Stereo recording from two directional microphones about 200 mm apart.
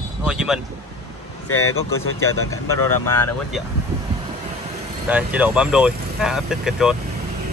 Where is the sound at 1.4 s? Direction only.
90° left.